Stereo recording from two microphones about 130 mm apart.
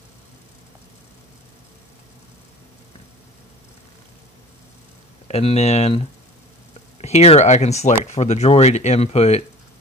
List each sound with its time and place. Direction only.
5.3 s speech: 55° left (ahead or behind)